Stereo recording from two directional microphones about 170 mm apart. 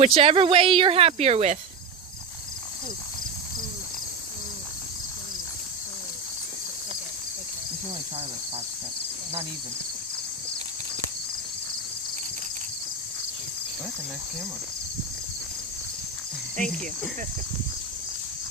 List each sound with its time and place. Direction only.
0.0 s speech: 35° right (ahead or behind)